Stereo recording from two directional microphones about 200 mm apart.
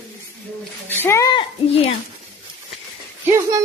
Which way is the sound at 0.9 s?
10° left (ahead or behind).